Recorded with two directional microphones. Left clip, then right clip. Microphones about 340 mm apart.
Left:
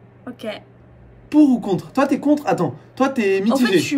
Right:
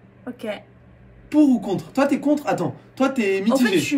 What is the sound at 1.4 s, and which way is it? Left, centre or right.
Speech, centre.